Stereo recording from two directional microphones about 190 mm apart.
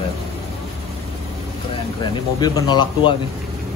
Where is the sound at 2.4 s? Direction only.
20° left (ahead or behind).